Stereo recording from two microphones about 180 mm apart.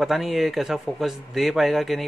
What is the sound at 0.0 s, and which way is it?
Speech, centre (ahead or behind).